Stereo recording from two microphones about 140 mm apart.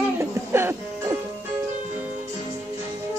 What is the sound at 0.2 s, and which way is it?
Music, 15° right (ahead or behind).